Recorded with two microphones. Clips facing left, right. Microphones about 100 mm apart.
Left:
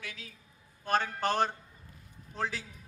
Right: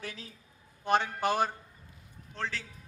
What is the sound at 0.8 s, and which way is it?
Speech, 20° right (ahead or behind).